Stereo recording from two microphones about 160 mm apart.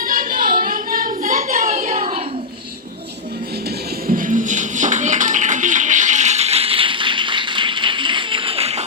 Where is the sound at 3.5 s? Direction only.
75° right (ahead or behind); by 8.8 s 40° right (ahead or behind).